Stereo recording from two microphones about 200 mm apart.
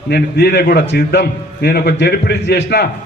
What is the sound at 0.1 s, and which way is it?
A man's voice, 55° left (ahead or behind).